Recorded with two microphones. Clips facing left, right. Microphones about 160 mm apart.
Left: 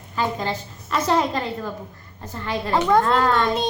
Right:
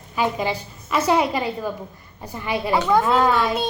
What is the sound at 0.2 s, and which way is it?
A woman's voice, 10° right (ahead or behind).